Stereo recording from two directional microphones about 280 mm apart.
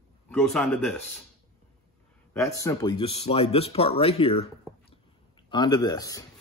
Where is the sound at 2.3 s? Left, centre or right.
Centre.